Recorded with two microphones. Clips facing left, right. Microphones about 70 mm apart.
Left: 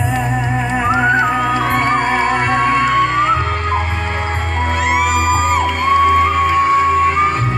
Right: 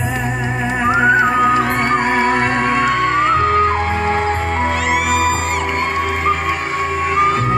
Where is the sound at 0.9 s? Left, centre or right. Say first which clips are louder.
Right 1 dB; centre.